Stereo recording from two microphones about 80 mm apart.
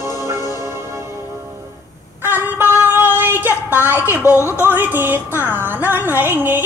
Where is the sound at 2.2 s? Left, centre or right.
Right.